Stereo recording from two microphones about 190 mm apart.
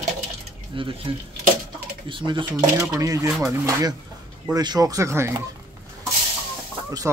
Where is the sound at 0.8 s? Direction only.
25° right (ahead or behind).